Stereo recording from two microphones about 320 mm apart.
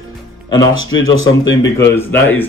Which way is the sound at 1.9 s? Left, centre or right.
Centre.